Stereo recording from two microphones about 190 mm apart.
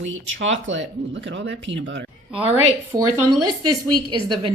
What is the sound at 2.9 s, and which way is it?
Speech, 20° right (ahead or behind).